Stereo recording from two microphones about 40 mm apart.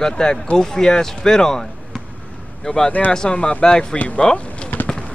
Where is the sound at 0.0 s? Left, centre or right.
Centre.